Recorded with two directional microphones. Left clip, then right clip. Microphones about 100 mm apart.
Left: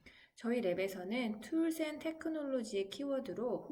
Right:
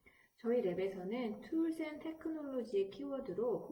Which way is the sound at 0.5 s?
15° left (ahead or behind).